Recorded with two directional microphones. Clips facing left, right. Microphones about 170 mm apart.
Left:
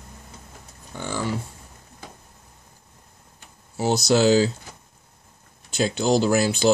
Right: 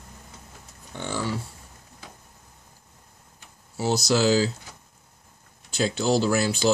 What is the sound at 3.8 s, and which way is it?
Speech, 25° left (ahead or behind).